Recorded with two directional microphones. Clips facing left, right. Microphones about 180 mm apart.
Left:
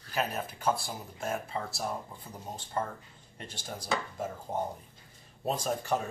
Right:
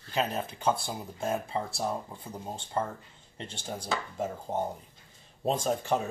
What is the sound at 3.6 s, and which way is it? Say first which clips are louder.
Speech: even; 25° right (ahead or behind).